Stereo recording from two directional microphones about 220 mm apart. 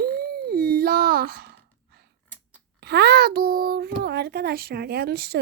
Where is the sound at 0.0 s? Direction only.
45° right (ahead or behind).